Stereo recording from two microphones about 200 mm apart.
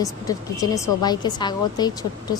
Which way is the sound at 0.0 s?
15° left (ahead or behind).